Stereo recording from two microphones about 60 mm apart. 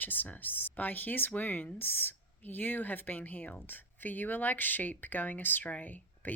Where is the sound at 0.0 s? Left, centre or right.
Left.